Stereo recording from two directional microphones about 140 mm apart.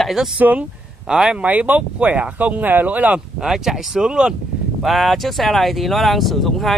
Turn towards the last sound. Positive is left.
turn(degrees=0)  # may be behind; listen again after turning